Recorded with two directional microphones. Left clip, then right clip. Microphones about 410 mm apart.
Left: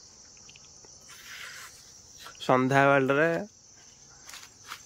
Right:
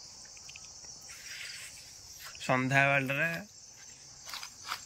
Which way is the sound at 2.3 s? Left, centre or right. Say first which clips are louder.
Left 5 dB; centre.